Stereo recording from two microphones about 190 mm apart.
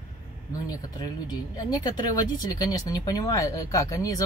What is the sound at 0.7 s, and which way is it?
Speech, 20° left (ahead or behind).